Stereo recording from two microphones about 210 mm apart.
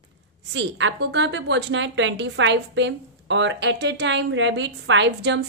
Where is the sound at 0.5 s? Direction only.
60° right (ahead or behind).